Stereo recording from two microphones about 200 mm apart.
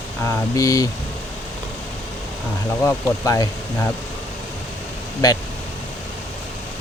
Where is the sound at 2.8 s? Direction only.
15° left (ahead or behind).